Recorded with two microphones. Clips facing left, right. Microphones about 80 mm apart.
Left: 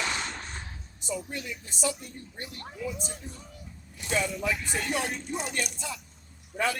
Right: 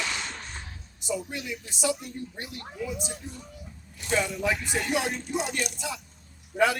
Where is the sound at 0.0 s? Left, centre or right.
Left.